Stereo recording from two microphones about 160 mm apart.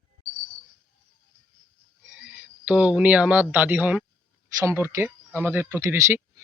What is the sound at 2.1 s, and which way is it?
A man's voice, 5° right (ahead or behind).